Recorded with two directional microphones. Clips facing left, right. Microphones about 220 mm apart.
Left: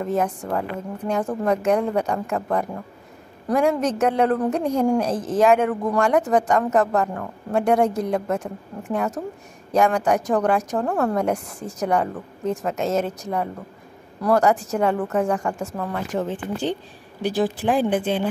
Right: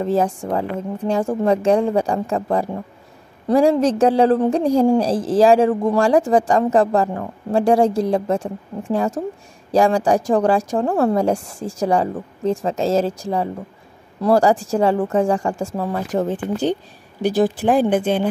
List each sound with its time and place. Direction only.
0.0 s a woman's voice: 30° right (ahead or behind)